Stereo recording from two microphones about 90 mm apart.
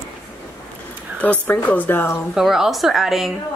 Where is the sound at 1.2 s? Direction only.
15° left (ahead or behind).